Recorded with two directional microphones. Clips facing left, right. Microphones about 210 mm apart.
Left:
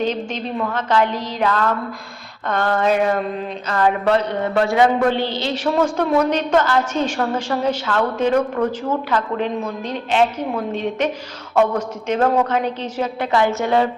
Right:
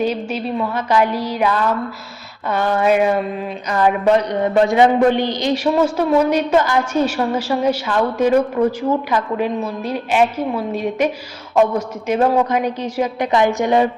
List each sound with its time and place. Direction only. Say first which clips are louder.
0.0 s a woman's voice: right 2 dB; 10° right (ahead or behind)